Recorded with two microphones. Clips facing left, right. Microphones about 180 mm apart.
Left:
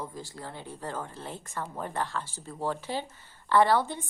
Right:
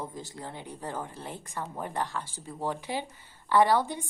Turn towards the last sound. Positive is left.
turn(degrees=-15)  # may be behind; listen again after turning